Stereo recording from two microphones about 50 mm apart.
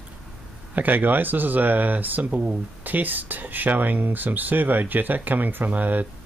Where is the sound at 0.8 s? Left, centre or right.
Right.